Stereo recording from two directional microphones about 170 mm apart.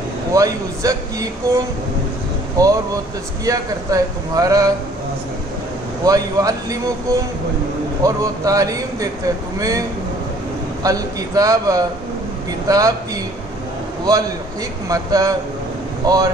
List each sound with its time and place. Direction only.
0.3 s a man's voice: 20° right (ahead or behind)
2.5 s a man's voice: 20° right (ahead or behind)
6.0 s a man's voice: 20° right (ahead or behind)
14.9 s a man's voice: 20° right (ahead or behind)